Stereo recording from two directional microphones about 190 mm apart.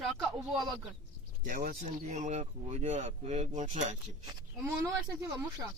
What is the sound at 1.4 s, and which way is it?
Speech, 45° right (ahead or behind).